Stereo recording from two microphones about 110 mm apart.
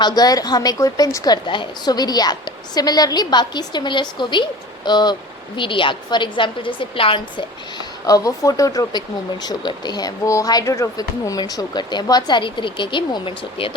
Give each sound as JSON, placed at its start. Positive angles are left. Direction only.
{"t": 0.0, "sound": "a woman's voice", "side_deg": 35}
{"t": 8.0, "sound": "speech", "side_deg": 35}